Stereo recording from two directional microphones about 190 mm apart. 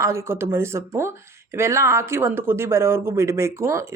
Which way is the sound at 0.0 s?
15° right (ahead or behind).